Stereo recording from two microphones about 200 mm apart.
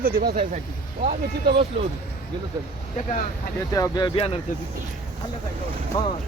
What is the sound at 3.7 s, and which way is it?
Speech, 20° left (ahead or behind).